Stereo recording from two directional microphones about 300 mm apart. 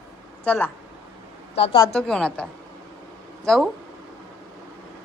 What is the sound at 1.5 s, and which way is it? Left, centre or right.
Speech, centre.